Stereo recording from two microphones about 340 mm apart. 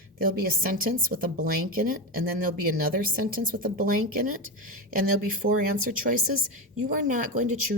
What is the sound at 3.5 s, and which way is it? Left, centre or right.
Speech, right.